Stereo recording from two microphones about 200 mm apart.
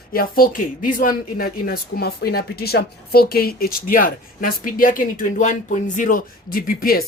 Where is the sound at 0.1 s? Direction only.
45° left (ahead or behind).